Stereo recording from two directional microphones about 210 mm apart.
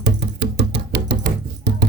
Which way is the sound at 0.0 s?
55° right (ahead or behind).